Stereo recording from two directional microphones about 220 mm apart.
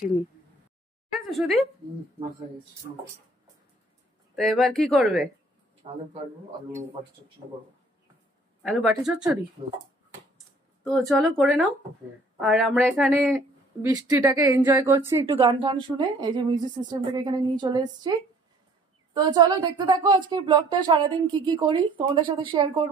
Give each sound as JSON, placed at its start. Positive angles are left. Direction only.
{"t": 1.2, "sound": "speech", "side_deg": 0}
{"t": 4.4, "sound": "speech", "side_deg": 0}
{"t": 5.8, "sound": "a woman's voice", "side_deg": -25}
{"t": 8.6, "sound": "speech", "side_deg": 0}
{"t": 9.6, "sound": "a woman's voice", "side_deg": -25}
{"t": 10.9, "sound": "speech", "side_deg": 0}
{"t": 13.8, "sound": "speech", "side_deg": -15}
{"t": 15.3, "sound": "a woman's voice", "side_deg": -25}
{"t": 19.1, "sound": "a woman's voice", "side_deg": -20}